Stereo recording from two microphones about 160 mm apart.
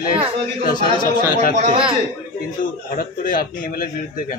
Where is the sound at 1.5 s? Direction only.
45° right (ahead or behind).